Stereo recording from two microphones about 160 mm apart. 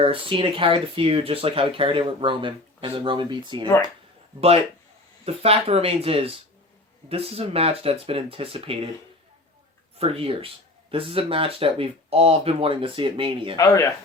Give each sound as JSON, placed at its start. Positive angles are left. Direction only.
{"t": 0.0, "sound": "speech", "side_deg": -35}
{"t": 5.2, "sound": "speech", "side_deg": -40}
{"t": 10.0, "sound": "speech", "side_deg": -35}
{"t": 13.6, "sound": "speech", "side_deg": 20}